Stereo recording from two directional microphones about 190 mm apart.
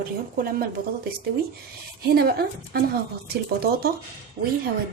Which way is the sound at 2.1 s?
55° right (ahead or behind).